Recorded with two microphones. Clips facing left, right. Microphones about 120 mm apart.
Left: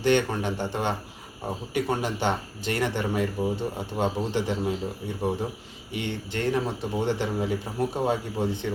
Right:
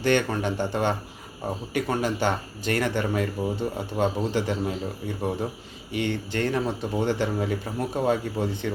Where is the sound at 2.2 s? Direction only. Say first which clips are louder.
Right 1 dB; 20° left (ahead or behind).